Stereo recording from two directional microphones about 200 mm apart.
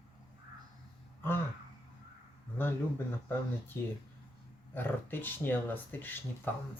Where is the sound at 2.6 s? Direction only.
10° left (ahead or behind).